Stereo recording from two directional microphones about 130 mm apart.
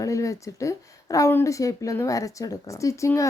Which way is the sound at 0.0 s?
25° left (ahead or behind).